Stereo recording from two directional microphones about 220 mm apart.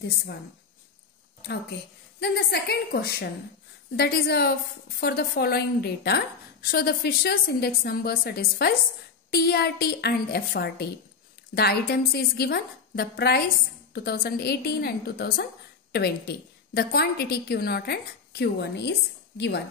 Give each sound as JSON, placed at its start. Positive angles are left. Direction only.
{"t": 2.1, "sound": "a woman's voice", "side_deg": 50}